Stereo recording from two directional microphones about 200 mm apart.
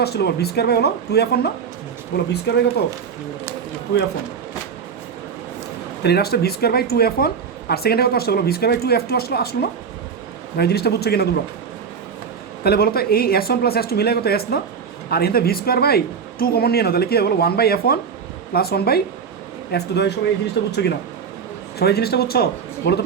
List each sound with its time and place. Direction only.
0.0 s speech: 55° left (ahead or behind)
6.0 s speech: 55° left (ahead or behind)
12.6 s speech: 50° left (ahead or behind)
21.8 s speech: 55° left (ahead or behind)